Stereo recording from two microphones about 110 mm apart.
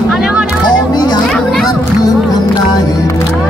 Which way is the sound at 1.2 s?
5° left (ahead or behind).